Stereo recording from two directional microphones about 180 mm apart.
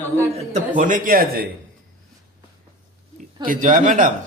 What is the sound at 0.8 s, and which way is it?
Speech, 45° right (ahead or behind).